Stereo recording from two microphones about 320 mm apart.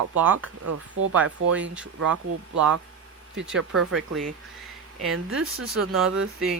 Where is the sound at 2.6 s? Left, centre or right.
Right.